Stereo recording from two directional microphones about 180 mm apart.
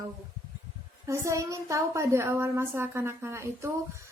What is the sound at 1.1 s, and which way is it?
A woman's voice, 15° right (ahead or behind).